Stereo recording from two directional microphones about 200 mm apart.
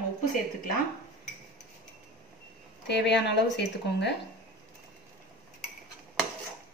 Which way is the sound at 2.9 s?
60° left (ahead or behind).